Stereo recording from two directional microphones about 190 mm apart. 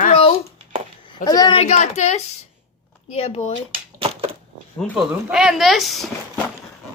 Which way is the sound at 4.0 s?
30° right (ahead or behind).